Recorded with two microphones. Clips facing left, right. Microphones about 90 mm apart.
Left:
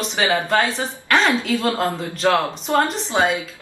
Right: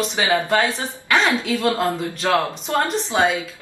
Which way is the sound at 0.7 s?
Centre (ahead or behind).